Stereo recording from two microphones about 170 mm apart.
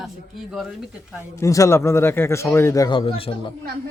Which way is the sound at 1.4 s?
20° left (ahead or behind).